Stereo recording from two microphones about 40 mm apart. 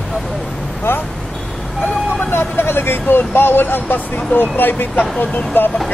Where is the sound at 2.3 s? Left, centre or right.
Left.